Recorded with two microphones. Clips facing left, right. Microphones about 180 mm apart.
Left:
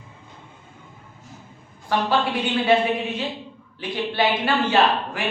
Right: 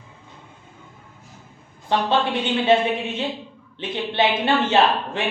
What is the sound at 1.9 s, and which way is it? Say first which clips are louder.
Speech: right 1 dB; 20° right (ahead or behind).